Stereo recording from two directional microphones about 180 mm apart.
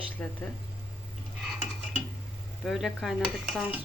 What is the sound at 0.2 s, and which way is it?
Speech, 5° left (ahead or behind).